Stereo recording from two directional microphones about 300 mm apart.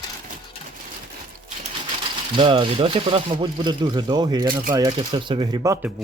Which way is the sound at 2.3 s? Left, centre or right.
Centre.